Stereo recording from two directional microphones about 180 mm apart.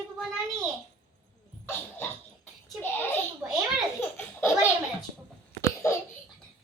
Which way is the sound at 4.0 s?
15° left (ahead or behind).